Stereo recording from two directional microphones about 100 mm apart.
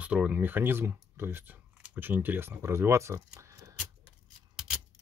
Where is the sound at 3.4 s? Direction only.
35° right (ahead or behind).